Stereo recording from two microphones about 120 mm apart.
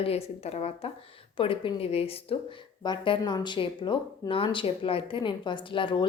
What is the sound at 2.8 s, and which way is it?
A woman's voice, 35° left (ahead or behind).